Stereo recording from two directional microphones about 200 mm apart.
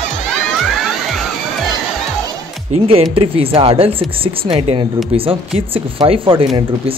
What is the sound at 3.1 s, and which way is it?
Speech, 30° right (ahead or behind).